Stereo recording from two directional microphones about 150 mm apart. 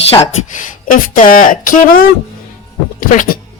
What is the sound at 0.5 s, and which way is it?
A woman's voice, 65° left (ahead or behind).